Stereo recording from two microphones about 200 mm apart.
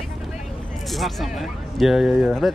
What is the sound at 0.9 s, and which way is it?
Speech, centre (ahead or behind).